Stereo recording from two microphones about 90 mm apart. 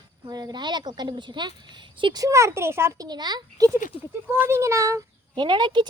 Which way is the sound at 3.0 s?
50° right (ahead or behind).